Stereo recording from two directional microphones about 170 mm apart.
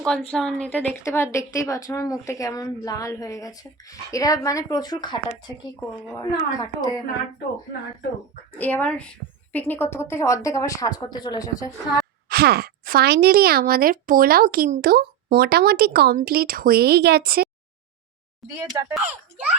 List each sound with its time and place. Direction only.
0.0 s a woman's voice: 5° left (ahead or behind); by 5.5 s 25° left (ahead or behind)
6.6 s speech: 20° left (ahead or behind)
8.5 s a woman's voice: 10° left (ahead or behind)
12.3 s speech: 65° right (ahead or behind)
18.6 s speech: 15° right (ahead or behind)